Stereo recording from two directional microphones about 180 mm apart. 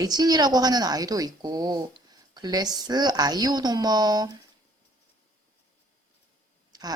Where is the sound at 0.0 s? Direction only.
20° right (ahead or behind).